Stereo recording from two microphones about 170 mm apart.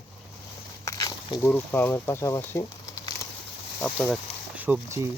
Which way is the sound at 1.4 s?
10° left (ahead or behind).